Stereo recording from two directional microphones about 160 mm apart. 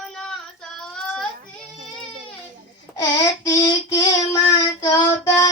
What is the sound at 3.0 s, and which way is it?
Child singing, 25° left (ahead or behind).